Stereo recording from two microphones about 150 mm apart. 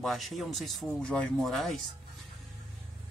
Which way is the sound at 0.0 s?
Centre (ahead or behind).